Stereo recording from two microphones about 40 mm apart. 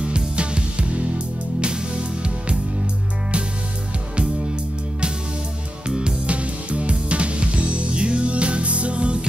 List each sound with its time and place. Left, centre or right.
0.0 s music: right
5.9 s music: right